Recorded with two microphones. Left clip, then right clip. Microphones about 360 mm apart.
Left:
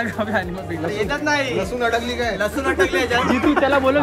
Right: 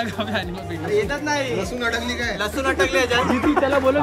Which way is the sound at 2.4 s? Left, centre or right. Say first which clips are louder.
Left 1 dB; centre.